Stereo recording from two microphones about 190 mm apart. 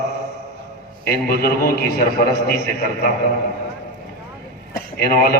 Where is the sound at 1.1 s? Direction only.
55° left (ahead or behind).